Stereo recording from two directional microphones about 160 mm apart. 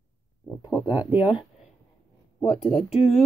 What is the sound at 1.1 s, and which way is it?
Speech, 10° right (ahead or behind).